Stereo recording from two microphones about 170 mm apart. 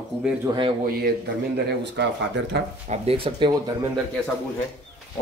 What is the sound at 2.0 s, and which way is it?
Speech, 90° right.